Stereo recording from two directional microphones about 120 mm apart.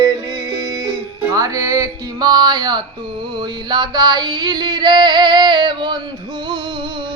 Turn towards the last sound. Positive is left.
turn(degrees=-40)  # may be behind; listen again after turning